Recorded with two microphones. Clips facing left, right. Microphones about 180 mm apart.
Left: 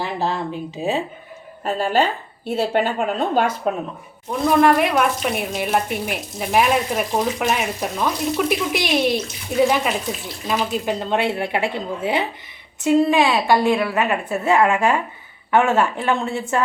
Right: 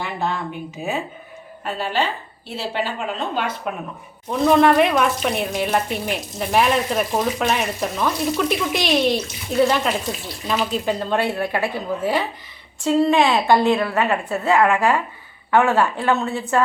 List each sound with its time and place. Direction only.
0.0 s speech: 35° left (ahead or behind)
1.6 s a woman's voice: 45° left (ahead or behind)
4.3 s speech: 5° left (ahead or behind)
13.2 s a woman's voice: 20° right (ahead or behind)
13.7 s speech: 15° left (ahead or behind)